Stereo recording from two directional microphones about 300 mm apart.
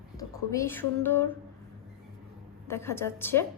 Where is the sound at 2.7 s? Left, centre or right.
Centre.